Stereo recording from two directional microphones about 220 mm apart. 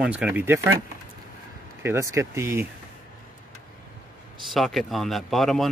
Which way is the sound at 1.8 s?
10° right (ahead or behind).